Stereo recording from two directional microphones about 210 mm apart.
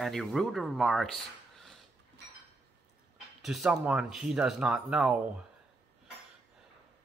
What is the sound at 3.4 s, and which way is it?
Speech, centre (ahead or behind).